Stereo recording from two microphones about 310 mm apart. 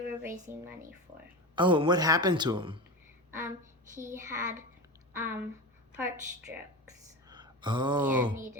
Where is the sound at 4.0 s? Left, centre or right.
Centre.